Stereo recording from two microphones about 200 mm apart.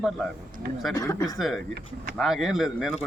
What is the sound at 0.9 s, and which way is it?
Speech, 15° left (ahead or behind).